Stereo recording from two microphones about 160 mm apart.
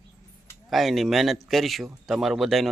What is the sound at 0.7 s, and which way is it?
A man's voice, centre (ahead or behind).